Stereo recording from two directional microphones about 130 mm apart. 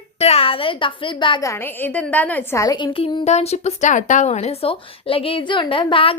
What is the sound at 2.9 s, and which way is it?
A woman's voice, 45° left (ahead or behind).